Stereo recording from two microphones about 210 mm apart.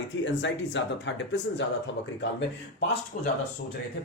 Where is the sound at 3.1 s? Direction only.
40° left (ahead or behind).